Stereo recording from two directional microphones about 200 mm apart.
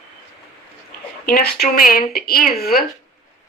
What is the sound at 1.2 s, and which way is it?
A woman's voice, 50° left (ahead or behind).